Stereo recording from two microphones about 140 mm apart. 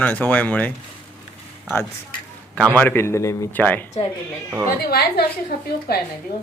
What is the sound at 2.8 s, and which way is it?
Speech, 15° left (ahead or behind).